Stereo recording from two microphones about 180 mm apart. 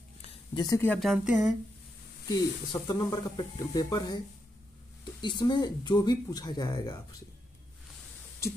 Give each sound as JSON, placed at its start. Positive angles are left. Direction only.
{"t": 0.6, "sound": "speech", "side_deg": 20}
{"t": 0.8, "sound": "speech", "side_deg": 0}
{"t": 2.2, "sound": "speech", "side_deg": 20}
{"t": 5.2, "sound": "speech", "side_deg": 25}